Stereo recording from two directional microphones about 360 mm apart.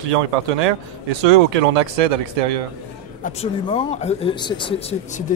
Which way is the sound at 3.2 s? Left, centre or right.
Centre.